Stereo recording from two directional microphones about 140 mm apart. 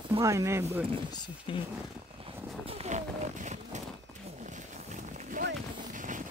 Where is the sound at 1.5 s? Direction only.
35° left (ahead or behind).